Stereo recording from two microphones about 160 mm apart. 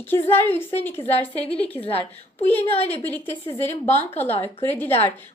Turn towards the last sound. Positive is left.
turn(degrees=10)  # may be behind; listen again after turning